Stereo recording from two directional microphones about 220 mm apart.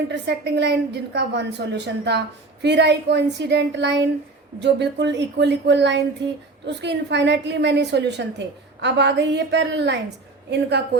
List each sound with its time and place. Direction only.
0.1 s a woman's voice: 50° right (ahead or behind)